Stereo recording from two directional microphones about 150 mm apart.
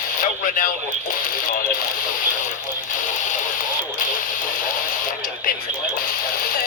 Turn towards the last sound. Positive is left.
turn(degrees=70)  # may be behind; listen again after turning